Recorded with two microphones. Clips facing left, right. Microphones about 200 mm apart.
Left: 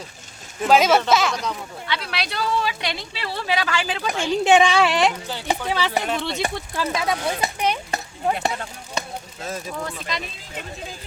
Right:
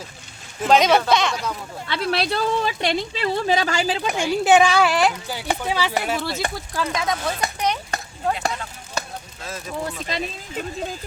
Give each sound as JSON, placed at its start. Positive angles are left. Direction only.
{"t": 0.6, "sound": "speech", "side_deg": 5}
{"t": 1.9, "sound": "a woman's voice", "side_deg": -45}
{"t": 4.1, "sound": "speech", "side_deg": -15}
{"t": 4.4, "sound": "speech", "side_deg": 0}
{"t": 6.8, "sound": "speech", "side_deg": 30}
{"t": 7.6, "sound": "chop", "side_deg": 10}
{"t": 9.8, "sound": "speech", "side_deg": -35}